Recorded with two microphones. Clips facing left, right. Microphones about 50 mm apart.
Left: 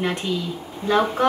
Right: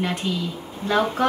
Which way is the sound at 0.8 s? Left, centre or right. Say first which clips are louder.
Left 2 dB; centre.